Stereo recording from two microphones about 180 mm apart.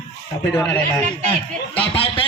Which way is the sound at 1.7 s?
30° left (ahead or behind).